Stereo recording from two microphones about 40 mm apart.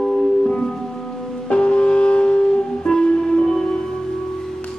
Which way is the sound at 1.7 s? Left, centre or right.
Left.